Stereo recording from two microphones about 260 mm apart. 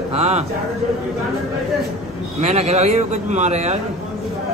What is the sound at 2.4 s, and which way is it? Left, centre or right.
A man's voice, right.